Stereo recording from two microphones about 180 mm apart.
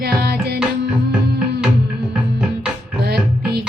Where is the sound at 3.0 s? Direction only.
65° right (ahead or behind).